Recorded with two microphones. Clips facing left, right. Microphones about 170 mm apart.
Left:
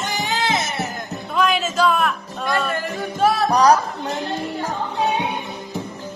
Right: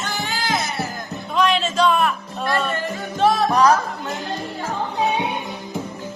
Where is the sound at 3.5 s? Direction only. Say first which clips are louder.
Left 3 dB; 40° left (ahead or behind).